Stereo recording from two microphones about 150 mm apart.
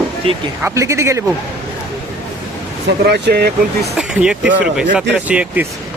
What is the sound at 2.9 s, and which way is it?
Speech, 90° right.